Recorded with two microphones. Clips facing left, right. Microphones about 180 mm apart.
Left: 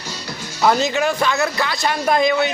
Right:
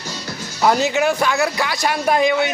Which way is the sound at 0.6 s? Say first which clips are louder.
Right 1 dB; 10° right (ahead or behind).